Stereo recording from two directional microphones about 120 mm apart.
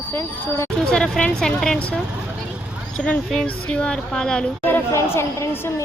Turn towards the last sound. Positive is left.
turn(degrees=20)  # may be behind; listen again after turning